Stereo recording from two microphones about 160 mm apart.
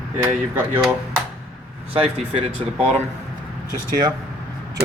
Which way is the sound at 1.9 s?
35° right (ahead or behind).